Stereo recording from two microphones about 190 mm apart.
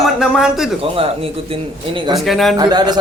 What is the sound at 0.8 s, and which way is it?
A man's voice, 30° right (ahead or behind).